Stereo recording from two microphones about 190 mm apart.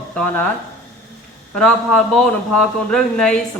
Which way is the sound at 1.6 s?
5° left (ahead or behind).